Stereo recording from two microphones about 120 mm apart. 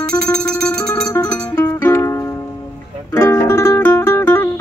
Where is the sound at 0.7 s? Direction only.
30° left (ahead or behind).